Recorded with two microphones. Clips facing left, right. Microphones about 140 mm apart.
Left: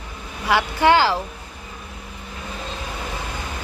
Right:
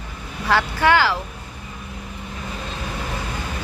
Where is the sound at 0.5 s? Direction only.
10° left (ahead or behind).